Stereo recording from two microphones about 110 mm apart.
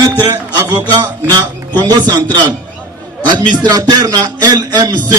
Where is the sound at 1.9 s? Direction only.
40° right (ahead or behind).